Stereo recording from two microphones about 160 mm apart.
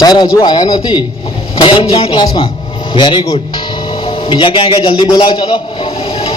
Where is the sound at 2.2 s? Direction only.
25° left (ahead or behind).